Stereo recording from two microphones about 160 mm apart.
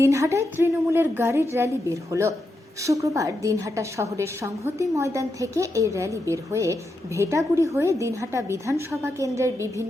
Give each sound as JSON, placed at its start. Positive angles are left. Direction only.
{"t": 0.0, "sound": "a woman's voice", "side_deg": -20}